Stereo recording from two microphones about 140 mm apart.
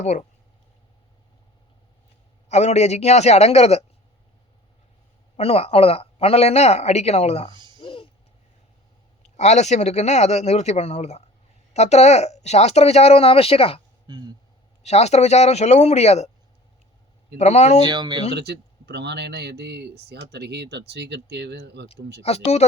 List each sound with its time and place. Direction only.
0.0 s speech: 55° left (ahead or behind)
2.5 s speech: 50° left (ahead or behind)
5.4 s speech: 45° left (ahead or behind)
7.8 s a sound: 40° left (ahead or behind)
9.4 s speech: 55° left (ahead or behind)
14.1 s speech: 30° right (ahead or behind)
14.8 s speech: 50° left (ahead or behind)
17.3 s speech: 50° left (ahead or behind)
17.8 s speech: 30° right (ahead or behind)
21.8 s speech: 45° left (ahead or behind)